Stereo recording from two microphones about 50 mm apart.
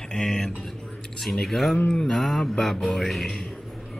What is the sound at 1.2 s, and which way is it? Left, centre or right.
Speech, centre.